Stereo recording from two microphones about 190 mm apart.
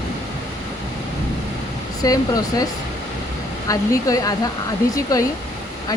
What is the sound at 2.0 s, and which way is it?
Speech, 20° left (ahead or behind).